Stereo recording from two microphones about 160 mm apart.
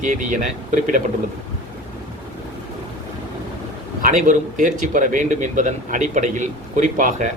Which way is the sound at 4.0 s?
55° right (ahead or behind).